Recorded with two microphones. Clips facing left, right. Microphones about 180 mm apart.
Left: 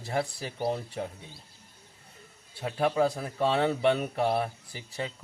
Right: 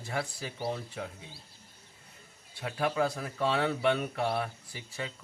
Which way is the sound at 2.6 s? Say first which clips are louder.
Left 4 dB; 25° left (ahead or behind).